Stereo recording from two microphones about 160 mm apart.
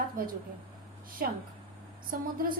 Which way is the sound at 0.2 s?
65° right (ahead or behind).